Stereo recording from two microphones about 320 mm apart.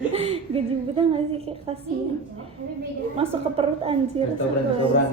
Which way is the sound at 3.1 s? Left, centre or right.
Centre.